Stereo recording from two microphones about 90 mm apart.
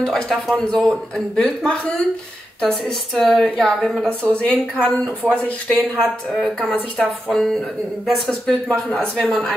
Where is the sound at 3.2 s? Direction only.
15° left (ahead or behind).